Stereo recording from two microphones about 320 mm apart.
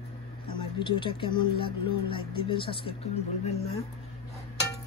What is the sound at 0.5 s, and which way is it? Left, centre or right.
Speech, centre.